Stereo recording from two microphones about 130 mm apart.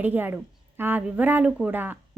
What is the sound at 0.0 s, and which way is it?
A woman's voice, 15° right (ahead or behind).